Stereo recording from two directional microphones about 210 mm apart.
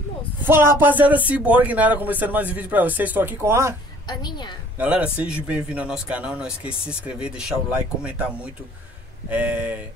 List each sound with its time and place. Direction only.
0.5 s speech: 10° right (ahead or behind)
4.1 s a woman's voice: 20° left (ahead or behind)
4.7 s speech: 5° right (ahead or behind)